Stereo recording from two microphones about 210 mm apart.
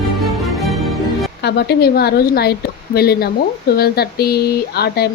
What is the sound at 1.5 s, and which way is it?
A woman's voice, 50° left (ahead or behind).